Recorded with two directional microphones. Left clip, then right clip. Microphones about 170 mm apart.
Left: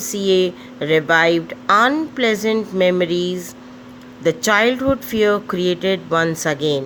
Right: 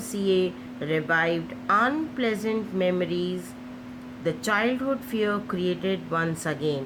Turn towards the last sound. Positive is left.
turn(degrees=55)  # may be behind; listen again after turning